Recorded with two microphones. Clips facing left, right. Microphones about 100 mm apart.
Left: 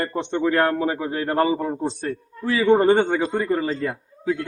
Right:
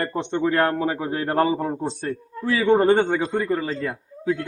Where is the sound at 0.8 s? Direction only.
10° right (ahead or behind).